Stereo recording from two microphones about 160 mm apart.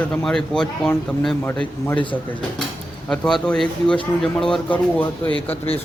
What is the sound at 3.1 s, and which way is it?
A man's voice, 5° left (ahead or behind).